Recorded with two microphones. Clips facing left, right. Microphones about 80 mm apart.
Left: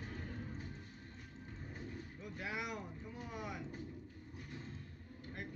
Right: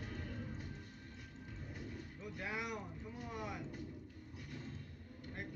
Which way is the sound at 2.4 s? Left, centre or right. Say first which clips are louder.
Even; centre.